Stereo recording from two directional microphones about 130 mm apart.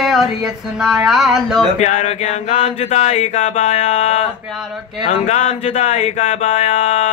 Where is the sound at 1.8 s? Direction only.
65° left (ahead or behind).